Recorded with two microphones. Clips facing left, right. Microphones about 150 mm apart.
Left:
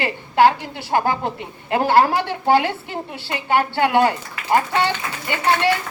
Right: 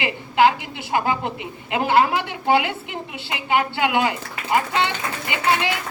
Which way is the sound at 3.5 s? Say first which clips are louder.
Left 3 dB; 40° left (ahead or behind).